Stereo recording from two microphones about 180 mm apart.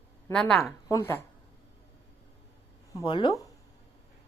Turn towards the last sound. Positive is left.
turn(degrees=30)  # may be behind; listen again after turning